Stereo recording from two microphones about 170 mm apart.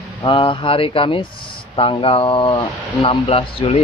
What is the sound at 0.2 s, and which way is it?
Speech, 30° left (ahead or behind).